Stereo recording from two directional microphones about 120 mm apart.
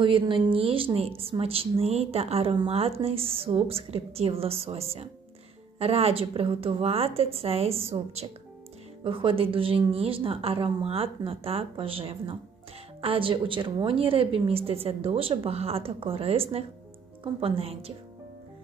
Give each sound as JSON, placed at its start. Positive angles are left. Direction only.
{"t": 0.0, "sound": "a woman's voice", "side_deg": -45}
{"t": 9.0, "sound": "a woman's voice", "side_deg": -45}